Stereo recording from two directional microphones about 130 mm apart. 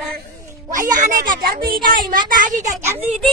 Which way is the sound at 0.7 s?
90° right.